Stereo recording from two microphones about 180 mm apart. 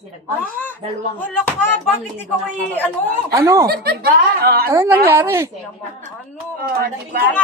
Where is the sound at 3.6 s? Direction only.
60° right (ahead or behind).